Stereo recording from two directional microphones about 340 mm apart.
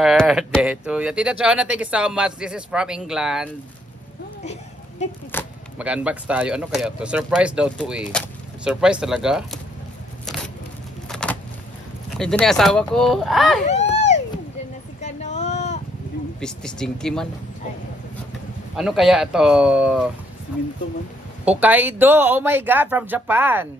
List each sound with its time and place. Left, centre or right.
0.0 s speech: centre
5.3 s speech: centre
10.2 s a sound: centre
11.1 s vehicle: centre
12.2 s speech: centre
13.7 s a sound: centre
16.3 s speech: centre
18.8 s speech: centre
21.5 s speech: centre